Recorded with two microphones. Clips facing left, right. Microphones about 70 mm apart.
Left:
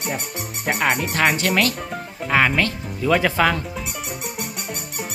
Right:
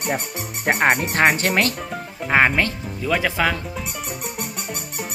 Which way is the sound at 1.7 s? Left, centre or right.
Centre.